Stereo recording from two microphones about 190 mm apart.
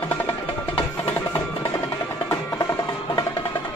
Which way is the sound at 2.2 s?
15° left (ahead or behind).